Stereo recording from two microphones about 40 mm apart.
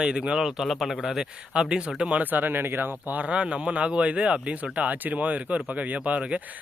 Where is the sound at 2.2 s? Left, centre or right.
Right.